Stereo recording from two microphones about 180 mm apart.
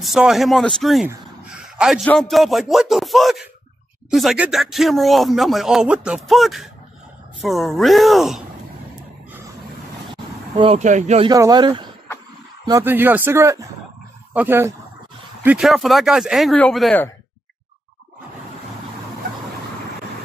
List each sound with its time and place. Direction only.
0.0 s speech: centre (ahead or behind)
1.0 s a sound: 5° right (ahead or behind)
2.0 s speech: centre (ahead or behind)
10.5 s speech: 35° right (ahead or behind)
11.2 s speech: 20° right (ahead or behind)
12.6 s speech: 15° right (ahead or behind); by 17.0 s 5° left (ahead or behind)